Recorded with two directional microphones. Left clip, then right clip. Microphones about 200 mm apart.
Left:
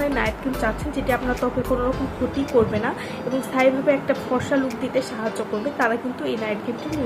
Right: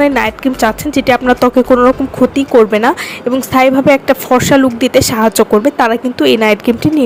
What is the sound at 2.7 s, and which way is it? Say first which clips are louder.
A woman's voice: right 14 dB; 55° right (ahead or behind).